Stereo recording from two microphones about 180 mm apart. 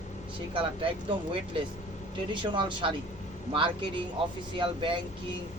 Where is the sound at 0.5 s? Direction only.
30° right (ahead or behind).